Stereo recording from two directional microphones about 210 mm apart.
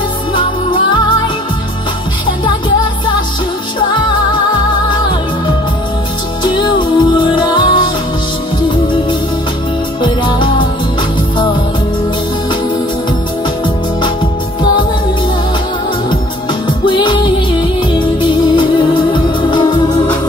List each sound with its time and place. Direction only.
0.3 s music: 25° left (ahead or behind)
6.4 s music: 20° left (ahead or behind)
10.0 s music: 20° left (ahead or behind)
16.6 s music: 20° left (ahead or behind)